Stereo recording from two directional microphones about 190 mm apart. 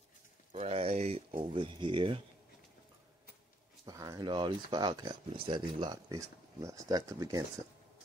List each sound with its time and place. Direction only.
0.5 s speech: 30° right (ahead or behind)
3.8 s speech: 20° right (ahead or behind)